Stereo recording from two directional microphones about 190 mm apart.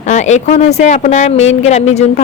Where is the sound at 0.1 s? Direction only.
40° left (ahead or behind).